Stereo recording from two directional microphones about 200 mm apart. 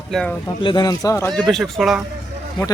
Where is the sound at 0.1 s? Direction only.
5° left (ahead or behind).